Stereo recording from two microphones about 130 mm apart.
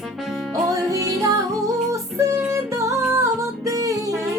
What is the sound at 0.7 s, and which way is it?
Music, 25° right (ahead or behind).